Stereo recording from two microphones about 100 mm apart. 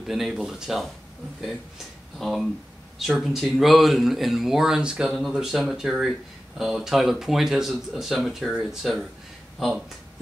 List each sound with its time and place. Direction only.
0.0 s speech: 5° right (ahead or behind)
2.1 s speech: centre (ahead or behind)